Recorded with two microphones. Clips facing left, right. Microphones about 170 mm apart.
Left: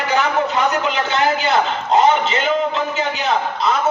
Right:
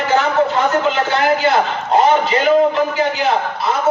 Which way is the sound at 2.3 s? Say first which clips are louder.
Right 6 dB; 20° left (ahead or behind).